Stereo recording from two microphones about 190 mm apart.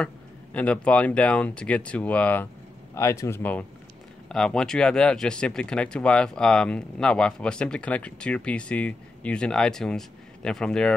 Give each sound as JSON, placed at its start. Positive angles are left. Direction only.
{"t": 0.0, "sound": "speech", "side_deg": 5}